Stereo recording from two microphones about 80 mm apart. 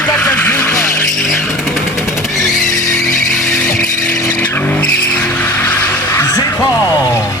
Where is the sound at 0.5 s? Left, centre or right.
Left.